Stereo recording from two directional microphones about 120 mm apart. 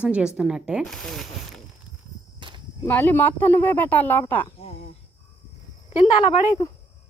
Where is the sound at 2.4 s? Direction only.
40° right (ahead or behind).